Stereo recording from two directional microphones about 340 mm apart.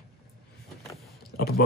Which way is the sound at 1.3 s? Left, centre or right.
Left.